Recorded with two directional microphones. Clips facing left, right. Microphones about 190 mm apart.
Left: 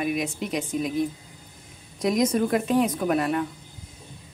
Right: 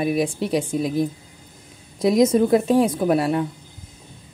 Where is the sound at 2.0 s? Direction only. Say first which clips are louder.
Right 6 dB; 25° right (ahead or behind).